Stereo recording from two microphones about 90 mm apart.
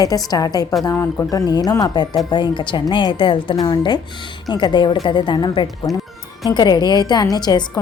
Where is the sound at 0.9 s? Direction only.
25° left (ahead or behind).